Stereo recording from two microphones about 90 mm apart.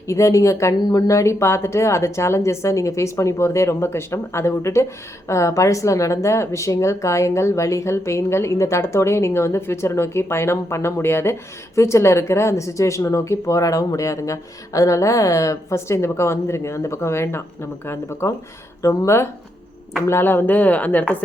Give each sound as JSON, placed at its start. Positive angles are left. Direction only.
{"t": 0.1, "sound": "speech", "side_deg": 35}